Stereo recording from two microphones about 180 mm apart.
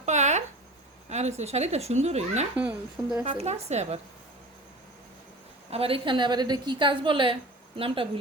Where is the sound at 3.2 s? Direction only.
40° right (ahead or behind).